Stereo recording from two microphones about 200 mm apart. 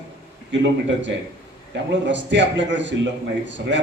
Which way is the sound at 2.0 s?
65° right (ahead or behind).